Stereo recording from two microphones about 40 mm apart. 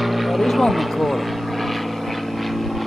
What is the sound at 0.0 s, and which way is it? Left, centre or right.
Vehicle, centre.